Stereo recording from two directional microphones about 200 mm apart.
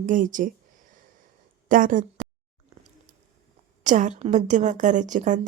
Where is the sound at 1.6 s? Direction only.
40° right (ahead or behind).